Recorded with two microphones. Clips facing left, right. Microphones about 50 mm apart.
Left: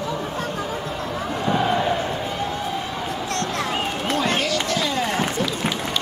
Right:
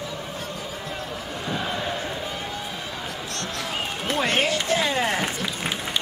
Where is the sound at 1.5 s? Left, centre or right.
Left.